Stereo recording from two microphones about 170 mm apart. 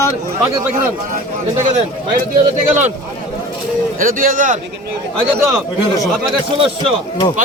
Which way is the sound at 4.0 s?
55° right (ahead or behind).